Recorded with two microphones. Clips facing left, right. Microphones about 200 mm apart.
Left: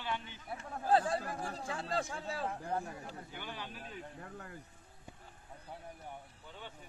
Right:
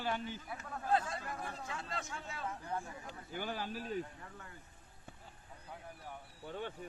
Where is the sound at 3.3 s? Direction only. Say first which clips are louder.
Right 10 dB; 45° right (ahead or behind).